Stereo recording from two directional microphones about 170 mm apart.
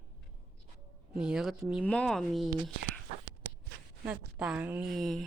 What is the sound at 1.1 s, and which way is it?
Speech, 5° right (ahead or behind).